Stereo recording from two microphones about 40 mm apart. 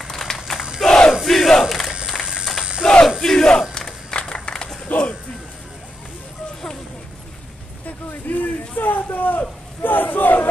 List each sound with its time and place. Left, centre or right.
0.0 s a sound: centre
0.8 s battle cry: centre
1.2 s crowd: centre
1.6 s a sound: centre
2.8 s battle cry: left
3.7 s applause: left
4.8 s music: left
8.1 s a sound: left
9.8 s crowd: left